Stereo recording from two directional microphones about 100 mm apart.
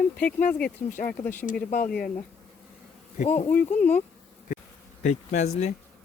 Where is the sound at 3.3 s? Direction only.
15° left (ahead or behind).